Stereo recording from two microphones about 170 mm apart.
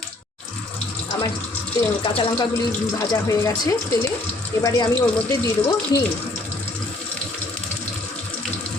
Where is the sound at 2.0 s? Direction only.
30° left (ahead or behind).